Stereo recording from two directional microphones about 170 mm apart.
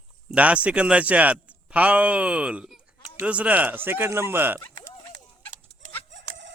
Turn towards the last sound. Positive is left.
turn(degrees=-90)